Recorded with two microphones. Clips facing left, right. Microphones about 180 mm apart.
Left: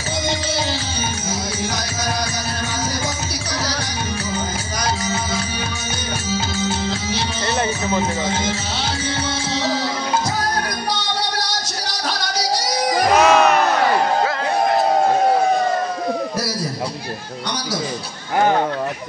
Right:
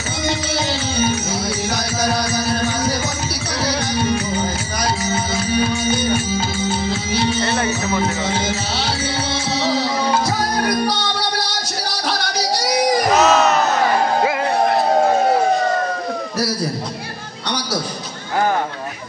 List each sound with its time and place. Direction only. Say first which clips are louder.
7.4 s music: right 1 dB; 20° left (ahead or behind)
13.1 s crowd: left 3 dB; 10° left (ahead or behind)